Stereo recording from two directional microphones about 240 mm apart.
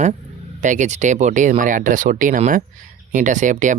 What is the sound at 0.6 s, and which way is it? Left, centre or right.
Speech, right.